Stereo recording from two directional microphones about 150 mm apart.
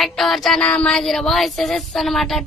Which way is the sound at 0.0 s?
Centre (ahead or behind).